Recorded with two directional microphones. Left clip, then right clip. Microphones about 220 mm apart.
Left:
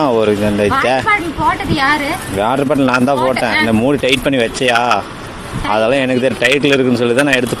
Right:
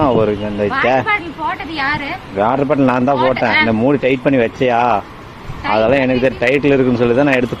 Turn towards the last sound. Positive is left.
turn(degrees=15)  # may be behind; listen again after turning